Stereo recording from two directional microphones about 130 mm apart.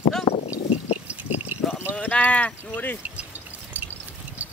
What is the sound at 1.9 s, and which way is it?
Speech, 10° left (ahead or behind).